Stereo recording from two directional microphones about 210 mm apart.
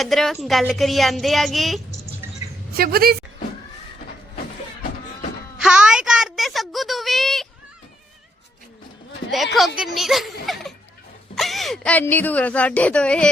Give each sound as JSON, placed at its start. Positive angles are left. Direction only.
{"t": 0.0, "sound": "a woman's voice", "side_deg": 0}
{"t": 2.7, "sound": "a woman's voice", "side_deg": -45}
{"t": 5.5, "sound": "a sound", "side_deg": -5}
{"t": 9.6, "sound": "music", "side_deg": 0}
{"t": 11.3, "sound": "speech", "side_deg": 0}